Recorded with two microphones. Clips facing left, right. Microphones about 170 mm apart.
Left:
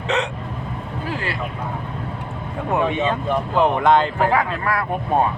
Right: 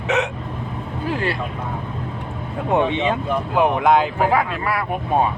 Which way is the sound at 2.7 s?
25° right (ahead or behind).